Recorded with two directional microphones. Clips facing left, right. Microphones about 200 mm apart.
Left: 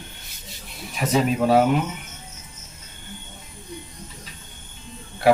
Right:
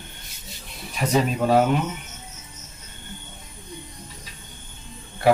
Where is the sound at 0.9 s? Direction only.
5° left (ahead or behind).